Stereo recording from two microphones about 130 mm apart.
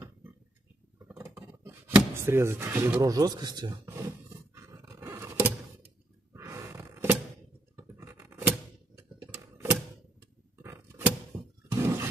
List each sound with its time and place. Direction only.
1.1 s speech: 20° right (ahead or behind)
3.8 s roar: 20° right (ahead or behind)
6.3 s a sound: 20° right (ahead or behind)
7.7 s scratch: 25° right (ahead or behind)
8.5 s typewriter: 15° right (ahead or behind)
10.6 s a sound: 15° right (ahead or behind)
11.8 s roar: 20° right (ahead or behind)